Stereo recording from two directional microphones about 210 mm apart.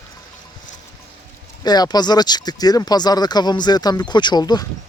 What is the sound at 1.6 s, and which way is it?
Speech, 20° left (ahead or behind).